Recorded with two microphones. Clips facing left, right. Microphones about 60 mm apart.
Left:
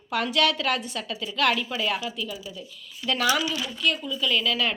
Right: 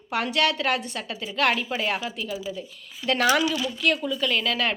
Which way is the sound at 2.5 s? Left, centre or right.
Right.